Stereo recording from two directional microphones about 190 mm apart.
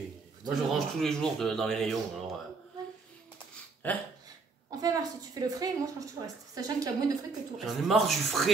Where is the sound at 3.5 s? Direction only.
10° left (ahead or behind).